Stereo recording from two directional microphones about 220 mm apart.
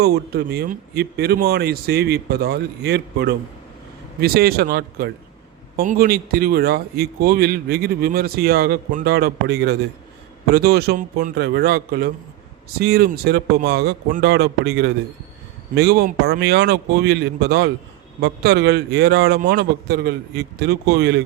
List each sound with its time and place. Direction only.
0.0 s a man's voice: 45° right (ahead or behind)